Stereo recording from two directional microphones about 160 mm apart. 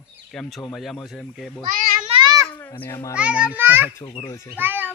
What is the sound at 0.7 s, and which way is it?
Speech, centre (ahead or behind).